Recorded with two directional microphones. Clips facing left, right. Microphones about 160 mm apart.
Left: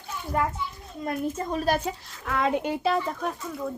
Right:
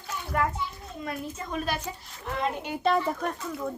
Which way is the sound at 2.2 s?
90° left.